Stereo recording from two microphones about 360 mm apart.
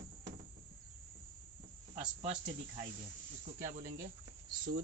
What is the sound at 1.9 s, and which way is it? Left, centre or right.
Speech, centre.